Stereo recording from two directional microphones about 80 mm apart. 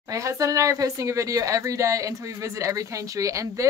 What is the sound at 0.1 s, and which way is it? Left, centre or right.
Speech, right.